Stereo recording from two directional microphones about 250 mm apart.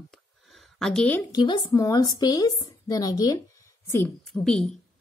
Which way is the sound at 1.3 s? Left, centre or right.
Centre.